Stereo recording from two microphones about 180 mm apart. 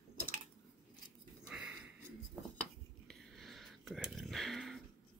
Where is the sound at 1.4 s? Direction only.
5° right (ahead or behind).